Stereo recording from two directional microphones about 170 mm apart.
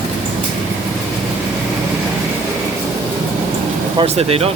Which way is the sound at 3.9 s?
35° right (ahead or behind).